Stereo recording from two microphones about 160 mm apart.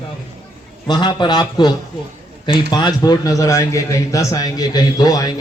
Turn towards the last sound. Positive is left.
turn(degrees=25)  # may be behind; listen again after turning